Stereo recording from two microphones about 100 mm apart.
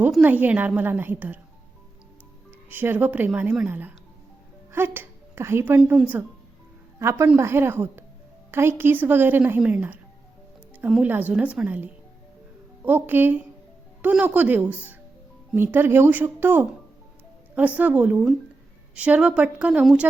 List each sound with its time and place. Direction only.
0.2 s a woman's voice: 15° right (ahead or behind)
2.6 s a woman's voice: 20° right (ahead or behind)
7.0 s a woman's voice: 30° right (ahead or behind)
11.0 s a woman's voice: 15° right (ahead or behind)